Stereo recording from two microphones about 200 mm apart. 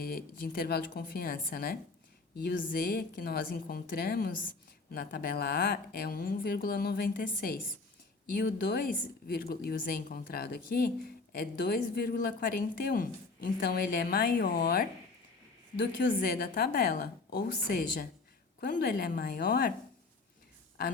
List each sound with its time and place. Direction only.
0.0 s a woman's voice: 50° left (ahead or behind)
15.8 s a woman's voice: 60° left (ahead or behind)